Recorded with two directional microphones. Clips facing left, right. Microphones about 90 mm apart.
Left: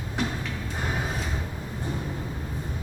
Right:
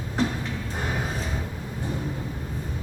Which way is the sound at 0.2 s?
30° right (ahead or behind).